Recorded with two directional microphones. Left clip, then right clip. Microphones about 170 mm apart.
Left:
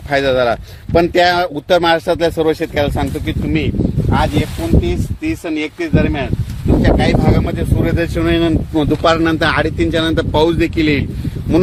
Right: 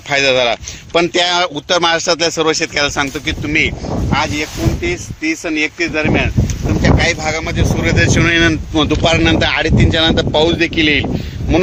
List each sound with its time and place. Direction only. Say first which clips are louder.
0.1 s speech: right 1 dB; 35° left (ahead or behind)
8.7 s speech: even; 40° left (ahead or behind); by 11.0 s 60° left (ahead or behind)